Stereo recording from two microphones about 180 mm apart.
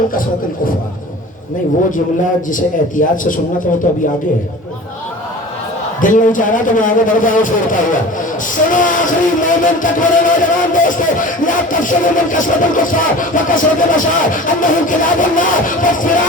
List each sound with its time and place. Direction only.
2.2 s speech: 45° left (ahead or behind)
6.0 s speech: 45° left (ahead or behind)